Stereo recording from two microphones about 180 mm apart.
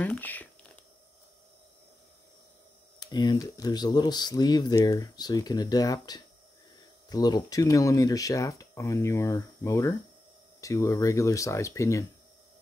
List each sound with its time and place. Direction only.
0.0 s speech: 10° left (ahead or behind)
3.0 s speech: 25° left (ahead or behind)